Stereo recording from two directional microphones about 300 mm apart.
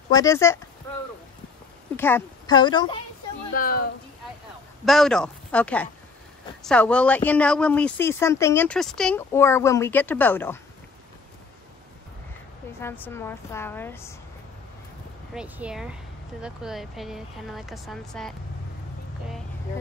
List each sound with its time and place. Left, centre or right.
0.1 s a woman's voice: centre
2.0 s a woman's voice: centre
3.5 s speech: left
4.8 s speech: centre
12.8 s a woman's voice: centre
15.3 s speech: centre